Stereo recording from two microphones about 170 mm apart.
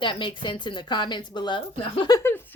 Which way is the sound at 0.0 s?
30° left (ahead or behind).